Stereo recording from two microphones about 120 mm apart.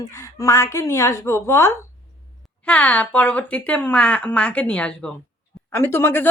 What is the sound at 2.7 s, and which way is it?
Speech, 10° left (ahead or behind).